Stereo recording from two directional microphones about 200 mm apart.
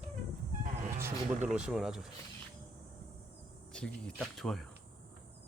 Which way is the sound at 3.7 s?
5° left (ahead or behind).